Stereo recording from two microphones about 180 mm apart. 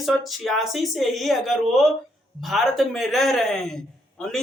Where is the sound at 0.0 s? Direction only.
Centre (ahead or behind).